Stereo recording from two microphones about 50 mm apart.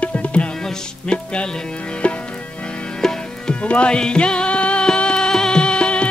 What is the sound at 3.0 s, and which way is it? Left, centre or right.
Music, centre.